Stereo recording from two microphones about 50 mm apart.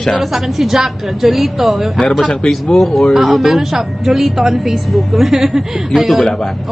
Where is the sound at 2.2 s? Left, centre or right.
Centre.